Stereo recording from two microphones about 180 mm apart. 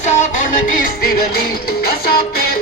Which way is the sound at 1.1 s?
55° left (ahead or behind).